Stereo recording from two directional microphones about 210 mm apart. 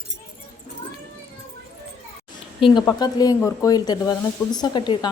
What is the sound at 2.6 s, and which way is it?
Speech, 25° left (ahead or behind).